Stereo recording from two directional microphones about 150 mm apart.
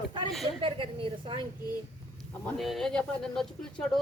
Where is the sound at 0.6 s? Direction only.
35° right (ahead or behind).